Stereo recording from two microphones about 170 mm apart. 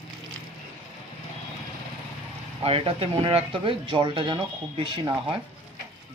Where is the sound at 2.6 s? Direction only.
35° right (ahead or behind).